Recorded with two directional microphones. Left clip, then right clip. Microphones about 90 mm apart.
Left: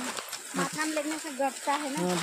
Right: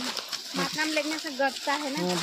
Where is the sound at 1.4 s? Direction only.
35° right (ahead or behind).